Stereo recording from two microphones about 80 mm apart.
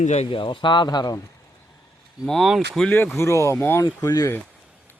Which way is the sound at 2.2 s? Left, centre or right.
Centre.